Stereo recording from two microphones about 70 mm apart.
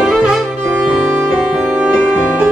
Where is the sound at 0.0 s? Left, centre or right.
Centre.